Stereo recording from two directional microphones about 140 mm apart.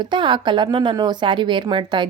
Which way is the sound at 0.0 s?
35° right (ahead or behind).